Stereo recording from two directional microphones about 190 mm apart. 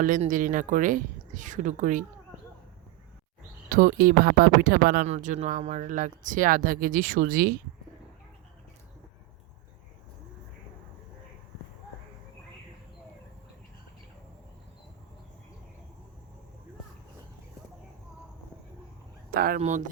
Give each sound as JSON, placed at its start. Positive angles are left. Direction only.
{"t": 0.0, "sound": "speech", "side_deg": -45}
{"t": 3.7, "sound": "speech", "side_deg": -45}
{"t": 5.0, "sound": "speech", "side_deg": -40}
{"t": 19.3, "sound": "speech", "side_deg": -50}
{"t": 19.5, "sound": "speech", "side_deg": -40}